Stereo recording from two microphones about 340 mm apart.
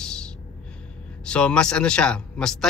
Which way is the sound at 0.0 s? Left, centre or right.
Centre.